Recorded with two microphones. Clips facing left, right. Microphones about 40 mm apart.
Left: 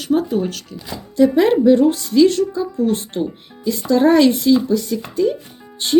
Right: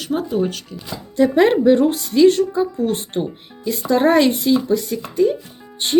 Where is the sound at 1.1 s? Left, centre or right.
Right.